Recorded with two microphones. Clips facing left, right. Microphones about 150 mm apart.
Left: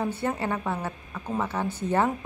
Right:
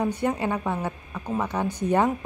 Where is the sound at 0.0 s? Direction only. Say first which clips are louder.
Right 3 dB; 15° right (ahead or behind).